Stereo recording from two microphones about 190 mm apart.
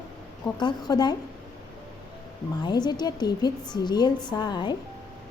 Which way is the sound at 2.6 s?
20° left (ahead or behind).